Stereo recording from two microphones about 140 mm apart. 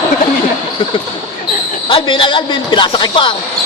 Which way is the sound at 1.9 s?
35° left (ahead or behind).